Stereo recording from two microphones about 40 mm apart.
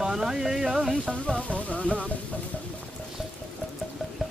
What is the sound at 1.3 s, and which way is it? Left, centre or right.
Speech, left.